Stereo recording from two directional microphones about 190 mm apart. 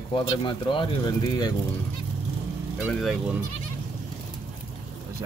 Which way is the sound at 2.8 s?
Centre (ahead or behind).